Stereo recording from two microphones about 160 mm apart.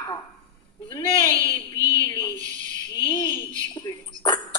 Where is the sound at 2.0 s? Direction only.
25° left (ahead or behind).